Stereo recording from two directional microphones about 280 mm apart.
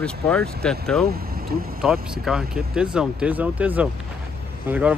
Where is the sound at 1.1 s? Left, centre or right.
Right.